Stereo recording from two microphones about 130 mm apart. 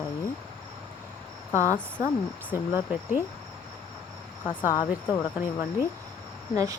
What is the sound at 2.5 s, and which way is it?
Speech, 15° right (ahead or behind).